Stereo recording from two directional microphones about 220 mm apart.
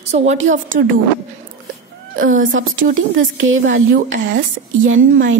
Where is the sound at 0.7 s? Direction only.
55° right (ahead or behind).